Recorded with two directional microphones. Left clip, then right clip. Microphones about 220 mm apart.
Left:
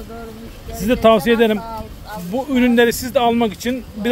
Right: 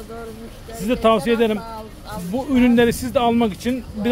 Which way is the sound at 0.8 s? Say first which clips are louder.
Left 4 dB; 20° left (ahead or behind).